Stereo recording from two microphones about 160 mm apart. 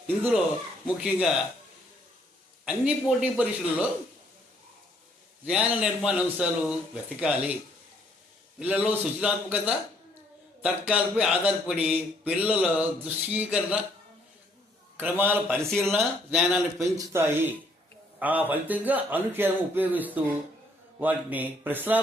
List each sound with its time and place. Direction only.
0.2 s a man's voice: 5° right (ahead or behind)
2.6 s speech: 5° right (ahead or behind)
5.5 s a man's voice: 5° right (ahead or behind)
8.5 s speech: 5° right (ahead or behind)
15.2 s speech: 15° right (ahead or behind)
15.7 s a man's voice: 5° left (ahead or behind)
16.7 s speech: 20° right (ahead or behind)